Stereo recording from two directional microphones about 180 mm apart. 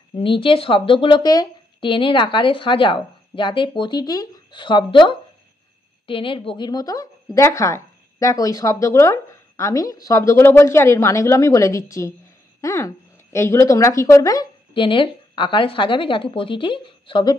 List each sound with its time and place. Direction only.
0.2 s speech: 30° left (ahead or behind)